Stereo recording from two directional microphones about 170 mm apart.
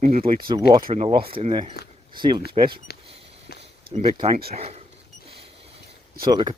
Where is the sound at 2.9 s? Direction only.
70° left (ahead or behind).